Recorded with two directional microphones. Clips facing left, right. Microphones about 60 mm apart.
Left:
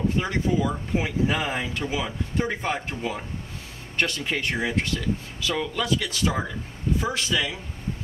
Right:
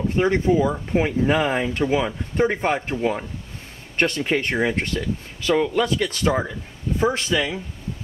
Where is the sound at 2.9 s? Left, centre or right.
Right.